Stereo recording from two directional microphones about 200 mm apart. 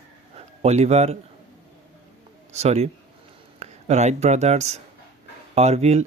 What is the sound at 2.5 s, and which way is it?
Speech, 30° right (ahead or behind).